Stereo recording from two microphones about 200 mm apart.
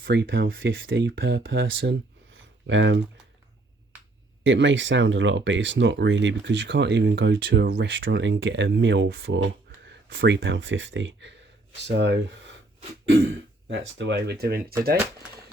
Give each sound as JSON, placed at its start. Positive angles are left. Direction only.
{"t": 0.0, "sound": "speech", "side_deg": -65}
{"t": 4.4, "sound": "speech", "side_deg": -65}
{"t": 13.7, "sound": "speech", "side_deg": -65}